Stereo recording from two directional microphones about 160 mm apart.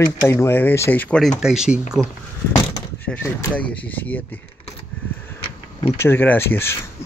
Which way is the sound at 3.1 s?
10° left (ahead or behind).